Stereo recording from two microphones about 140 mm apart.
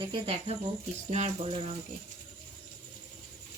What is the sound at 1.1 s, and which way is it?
Speech, 50° right (ahead or behind).